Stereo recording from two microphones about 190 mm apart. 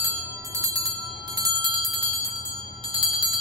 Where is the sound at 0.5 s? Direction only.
20° right (ahead or behind).